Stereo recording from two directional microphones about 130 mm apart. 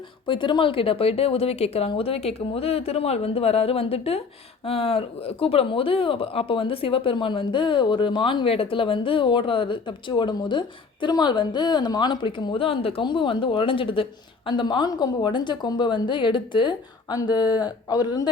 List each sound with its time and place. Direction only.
0.3 s speech: 40° left (ahead or behind)